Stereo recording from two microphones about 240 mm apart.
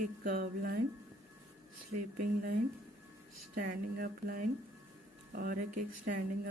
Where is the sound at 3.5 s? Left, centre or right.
Right.